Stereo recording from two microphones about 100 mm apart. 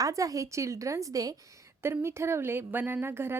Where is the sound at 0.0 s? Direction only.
35° right (ahead or behind).